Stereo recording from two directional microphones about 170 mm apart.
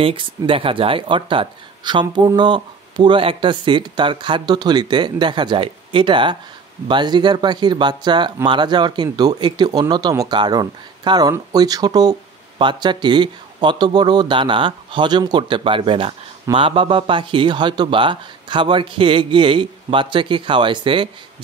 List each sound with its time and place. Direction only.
0.0 s speech: 30° right (ahead or behind)